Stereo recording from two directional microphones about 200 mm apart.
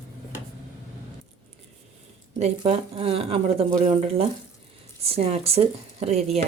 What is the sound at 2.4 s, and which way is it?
Speech, 30° right (ahead or behind).